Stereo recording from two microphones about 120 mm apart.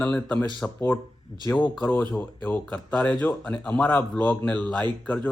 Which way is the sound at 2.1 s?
15° left (ahead or behind).